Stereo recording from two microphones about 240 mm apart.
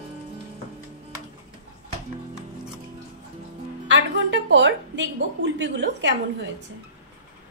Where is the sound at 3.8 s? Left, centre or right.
Right.